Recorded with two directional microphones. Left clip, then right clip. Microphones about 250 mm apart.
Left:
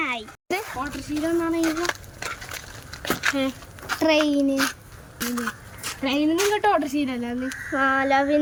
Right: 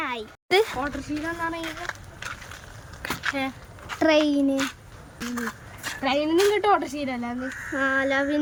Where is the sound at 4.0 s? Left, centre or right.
Centre.